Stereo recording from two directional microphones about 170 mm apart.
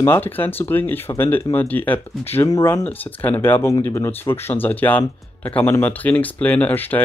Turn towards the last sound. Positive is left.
turn(degrees=10)  # may be behind; listen again after turning